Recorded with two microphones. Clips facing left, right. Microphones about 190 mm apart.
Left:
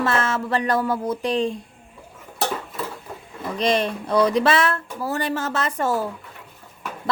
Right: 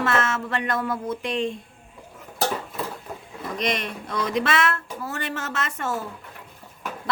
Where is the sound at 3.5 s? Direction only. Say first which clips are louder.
Left 6 dB; 30° left (ahead or behind).